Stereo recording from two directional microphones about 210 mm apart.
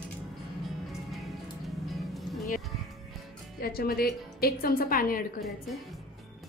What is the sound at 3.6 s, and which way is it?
A woman's voice, 45° left (ahead or behind).